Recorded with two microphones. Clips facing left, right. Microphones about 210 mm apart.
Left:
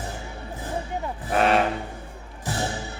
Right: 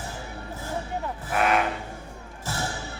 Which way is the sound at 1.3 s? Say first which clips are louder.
Left 3 dB; 30° left (ahead or behind).